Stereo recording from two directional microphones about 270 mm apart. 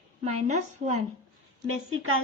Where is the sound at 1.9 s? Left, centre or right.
Right.